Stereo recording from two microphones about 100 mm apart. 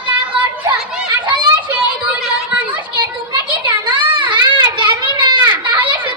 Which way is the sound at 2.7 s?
50° right (ahead or behind).